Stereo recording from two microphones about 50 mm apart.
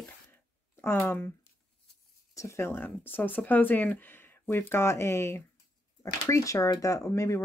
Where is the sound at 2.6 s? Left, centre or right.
Left.